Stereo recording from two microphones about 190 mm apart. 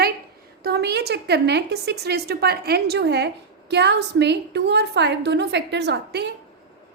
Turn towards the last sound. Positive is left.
turn(degrees=-65)  # may be behind; listen again after turning